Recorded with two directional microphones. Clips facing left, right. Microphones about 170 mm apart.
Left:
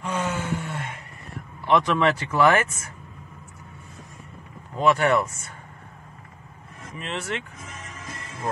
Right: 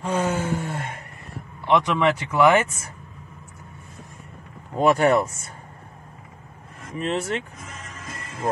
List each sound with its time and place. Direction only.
0.0 s a sound: 35° right (ahead or behind)
1.7 s speech: 20° right (ahead or behind)
4.7 s speech: 40° right (ahead or behind)
7.0 s speech: 40° right (ahead or behind)